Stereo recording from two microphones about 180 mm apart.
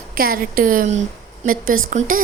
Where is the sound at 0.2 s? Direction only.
50° right (ahead or behind).